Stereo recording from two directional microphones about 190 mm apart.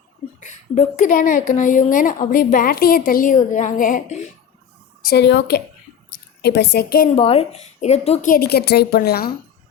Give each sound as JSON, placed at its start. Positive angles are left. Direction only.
{"t": 0.3, "sound": "a woman's voice", "side_deg": 40}
{"t": 5.0, "sound": "a woman's voice", "side_deg": 60}
{"t": 7.2, "sound": "a woman's voice", "side_deg": 30}
{"t": 8.3, "sound": "a woman's voice", "side_deg": 55}